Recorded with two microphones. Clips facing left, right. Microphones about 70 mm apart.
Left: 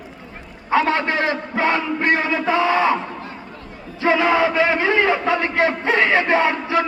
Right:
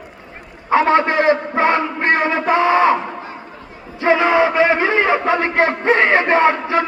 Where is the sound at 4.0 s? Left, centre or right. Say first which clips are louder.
Right 3 dB; right.